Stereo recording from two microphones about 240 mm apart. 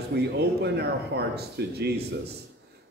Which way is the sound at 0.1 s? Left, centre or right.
Right.